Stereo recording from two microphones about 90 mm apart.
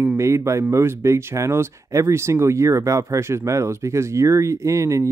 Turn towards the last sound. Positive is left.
turn(degrees=-35)  # may be behind; listen again after turning